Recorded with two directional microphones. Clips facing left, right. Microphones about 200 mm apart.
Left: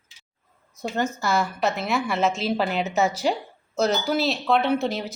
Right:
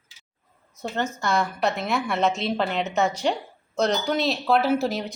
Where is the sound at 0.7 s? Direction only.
10° left (ahead or behind).